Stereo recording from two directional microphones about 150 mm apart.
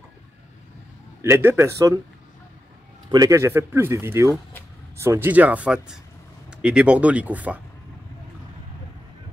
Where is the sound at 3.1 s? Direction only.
25° right (ahead or behind).